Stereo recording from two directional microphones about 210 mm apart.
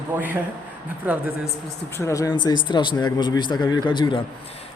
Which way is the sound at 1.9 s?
15° left (ahead or behind).